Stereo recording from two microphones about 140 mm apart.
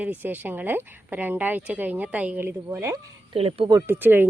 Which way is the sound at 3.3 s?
45° right (ahead or behind).